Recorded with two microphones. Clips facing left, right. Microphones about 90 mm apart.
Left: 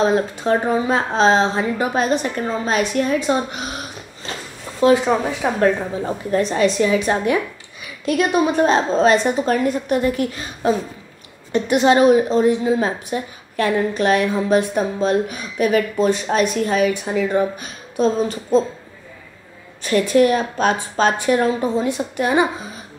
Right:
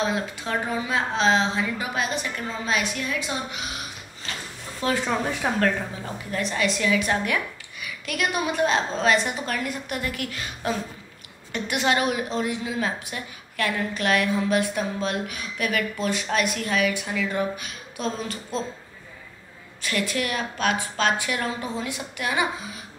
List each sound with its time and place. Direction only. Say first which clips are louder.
0.0 s a woman's voice: left 9 dB; 35° left (ahead or behind)
4.9 s a woman's voice: left 8 dB; 20° left (ahead or behind)
5.6 s a woman's voice: left 7 dB; 30° left (ahead or behind)
19.8 s a woman's voice: left 12 dB; 35° left (ahead or behind)